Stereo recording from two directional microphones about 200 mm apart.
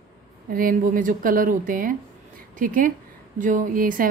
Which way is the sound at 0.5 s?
45° right (ahead or behind).